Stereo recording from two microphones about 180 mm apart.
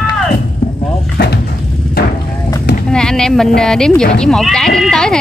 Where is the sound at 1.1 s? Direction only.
65° left (ahead or behind).